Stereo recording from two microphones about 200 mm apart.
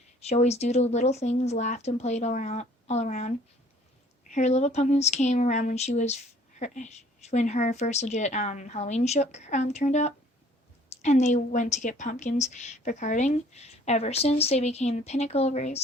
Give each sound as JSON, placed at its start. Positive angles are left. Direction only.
{"t": 0.2, "sound": "a woman's voice", "side_deg": 30}